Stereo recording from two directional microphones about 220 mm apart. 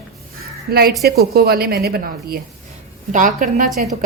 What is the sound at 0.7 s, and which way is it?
A woman's voice, 45° right (ahead or behind).